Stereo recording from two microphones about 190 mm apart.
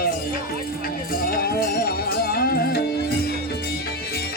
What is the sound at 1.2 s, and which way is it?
Music, 50° left (ahead or behind).